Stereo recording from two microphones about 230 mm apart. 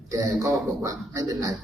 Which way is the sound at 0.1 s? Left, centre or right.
Centre.